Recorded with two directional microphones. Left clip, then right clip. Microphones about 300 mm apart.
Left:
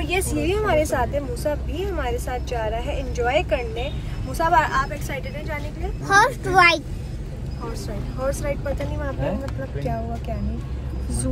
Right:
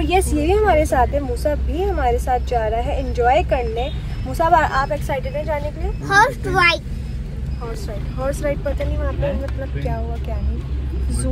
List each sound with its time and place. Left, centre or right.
0.0 s speech: centre
6.0 s a child's voice: centre
8.3 s speech: centre